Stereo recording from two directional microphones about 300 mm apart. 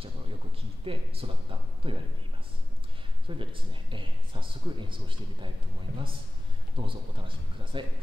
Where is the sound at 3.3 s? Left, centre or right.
Centre.